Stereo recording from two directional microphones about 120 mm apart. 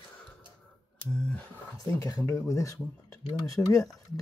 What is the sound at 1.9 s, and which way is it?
Speech, 30° left (ahead or behind).